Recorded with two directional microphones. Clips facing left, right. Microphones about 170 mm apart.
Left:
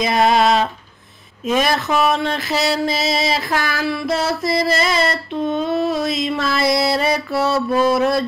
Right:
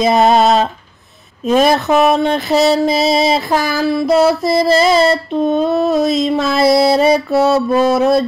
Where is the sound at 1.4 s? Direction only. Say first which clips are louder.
Right 6 dB; 35° right (ahead or behind).